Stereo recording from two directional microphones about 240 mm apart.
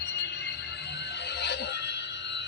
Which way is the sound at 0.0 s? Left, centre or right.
Left.